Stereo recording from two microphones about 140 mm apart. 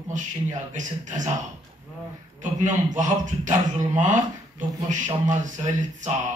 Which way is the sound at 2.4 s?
60° right (ahead or behind).